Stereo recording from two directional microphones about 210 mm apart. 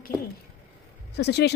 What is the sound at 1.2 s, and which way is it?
Speech, 50° left (ahead or behind).